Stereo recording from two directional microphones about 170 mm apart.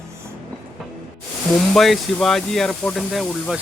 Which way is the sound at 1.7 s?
Centre (ahead or behind).